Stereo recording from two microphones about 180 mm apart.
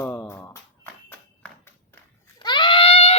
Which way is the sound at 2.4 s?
25° left (ahead or behind).